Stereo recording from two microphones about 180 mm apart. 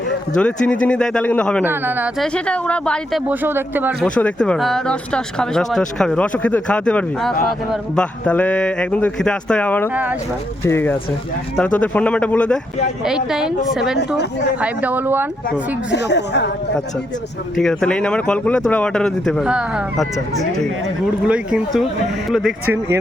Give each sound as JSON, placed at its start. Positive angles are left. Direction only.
{"t": 0.3, "sound": "speech", "side_deg": 5}
{"t": 1.6, "sound": "speech", "side_deg": -10}
{"t": 2.1, "sound": "speech", "side_deg": 5}
{"t": 3.2, "sound": "speech", "side_deg": -10}
{"t": 4.0, "sound": "speech", "side_deg": 5}
{"t": 9.9, "sound": "speech", "side_deg": -10}
{"t": 10.7, "sound": "speech", "side_deg": 10}
{"t": 14.2, "sound": "speech", "side_deg": 70}
{"t": 14.6, "sound": "speech", "side_deg": -10}
{"t": 15.9, "sound": "speech", "side_deg": 70}
{"t": 17.6, "sound": "speech", "side_deg": 0}